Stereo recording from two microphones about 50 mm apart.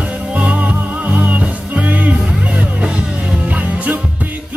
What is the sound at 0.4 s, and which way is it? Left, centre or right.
Music, right.